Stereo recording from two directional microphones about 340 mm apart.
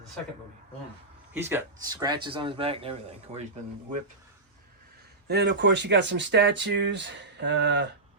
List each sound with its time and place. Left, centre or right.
1.3 s speech: centre
5.3 s speech: right